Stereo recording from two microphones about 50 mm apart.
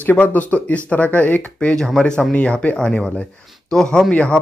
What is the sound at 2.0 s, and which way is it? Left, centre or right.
Speech, left.